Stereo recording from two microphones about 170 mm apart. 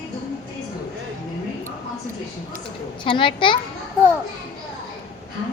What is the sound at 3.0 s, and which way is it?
Speech, 30° left (ahead or behind).